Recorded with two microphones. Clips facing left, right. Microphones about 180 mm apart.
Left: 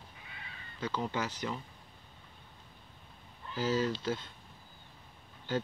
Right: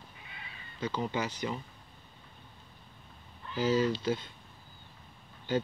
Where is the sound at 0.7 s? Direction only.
5° right (ahead or behind).